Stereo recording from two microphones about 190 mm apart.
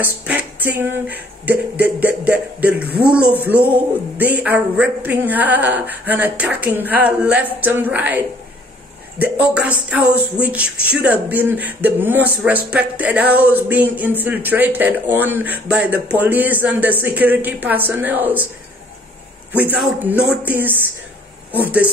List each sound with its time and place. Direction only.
0.0 s speech: 10° right (ahead or behind)
9.2 s speech: 5° right (ahead or behind)
19.5 s speech: 10° right (ahead or behind)